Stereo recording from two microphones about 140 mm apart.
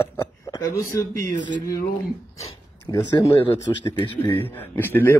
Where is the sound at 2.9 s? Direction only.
30° left (ahead or behind).